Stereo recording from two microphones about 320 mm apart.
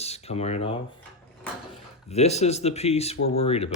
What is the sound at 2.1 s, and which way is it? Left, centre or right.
Speech, centre.